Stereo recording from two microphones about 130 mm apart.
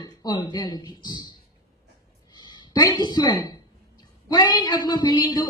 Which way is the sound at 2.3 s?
35° left (ahead or behind).